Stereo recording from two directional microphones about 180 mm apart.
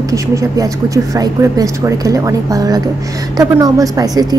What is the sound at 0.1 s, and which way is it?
Speech, 15° right (ahead or behind).